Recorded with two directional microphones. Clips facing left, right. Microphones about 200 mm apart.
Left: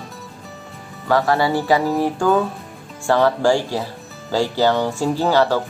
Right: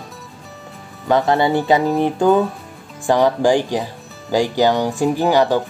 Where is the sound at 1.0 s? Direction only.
20° right (ahead or behind).